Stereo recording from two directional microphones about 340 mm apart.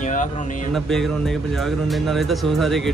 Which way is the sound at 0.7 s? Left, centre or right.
Centre.